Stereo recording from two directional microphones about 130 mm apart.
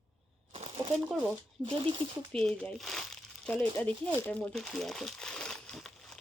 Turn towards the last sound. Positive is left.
turn(degrees=0)  # may be behind; listen again after turning